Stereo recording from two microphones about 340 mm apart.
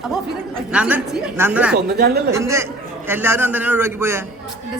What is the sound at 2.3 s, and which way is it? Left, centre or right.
A man's voice, centre.